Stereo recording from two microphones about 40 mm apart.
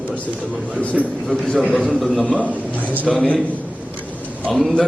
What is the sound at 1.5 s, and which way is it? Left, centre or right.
A man's voice, left.